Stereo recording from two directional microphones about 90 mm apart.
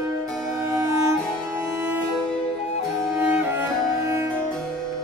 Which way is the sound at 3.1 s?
25° right (ahead or behind).